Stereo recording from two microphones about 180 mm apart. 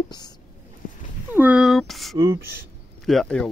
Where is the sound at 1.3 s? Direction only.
5° right (ahead or behind).